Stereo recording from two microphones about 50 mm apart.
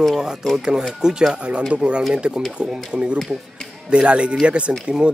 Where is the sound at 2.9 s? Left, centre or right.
Centre.